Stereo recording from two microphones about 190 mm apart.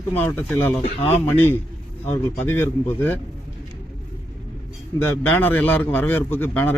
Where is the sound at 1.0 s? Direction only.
30° left (ahead or behind).